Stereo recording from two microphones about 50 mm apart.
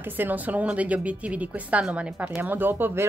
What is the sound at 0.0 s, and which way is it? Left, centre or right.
A woman's voice, right.